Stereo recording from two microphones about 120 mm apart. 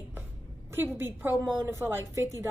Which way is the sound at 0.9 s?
20° right (ahead or behind).